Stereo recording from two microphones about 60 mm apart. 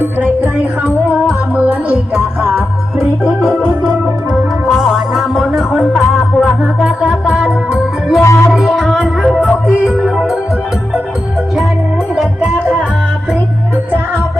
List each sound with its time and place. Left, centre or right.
0.0 s music: right
1.5 s music: right
4.7 s music: centre
8.2 s music: left
8.5 s music: centre